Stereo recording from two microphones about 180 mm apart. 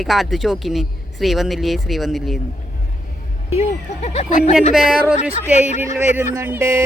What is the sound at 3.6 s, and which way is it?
Speech, 35° left (ahead or behind).